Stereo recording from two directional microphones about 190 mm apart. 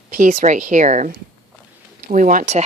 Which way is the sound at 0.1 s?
45° right (ahead or behind).